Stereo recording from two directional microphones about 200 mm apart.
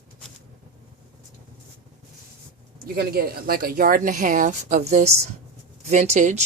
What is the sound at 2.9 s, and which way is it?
Speech, 50° right (ahead or behind).